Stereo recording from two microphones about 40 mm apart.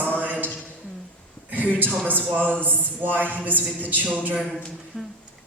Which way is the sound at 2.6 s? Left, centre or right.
Right.